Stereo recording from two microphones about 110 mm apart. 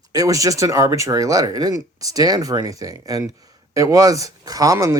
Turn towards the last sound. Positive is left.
turn(degrees=-30)  # may be behind; listen again after turning